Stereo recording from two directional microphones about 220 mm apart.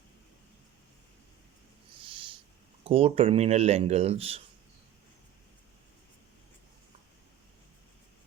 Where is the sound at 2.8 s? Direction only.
25° right (ahead or behind).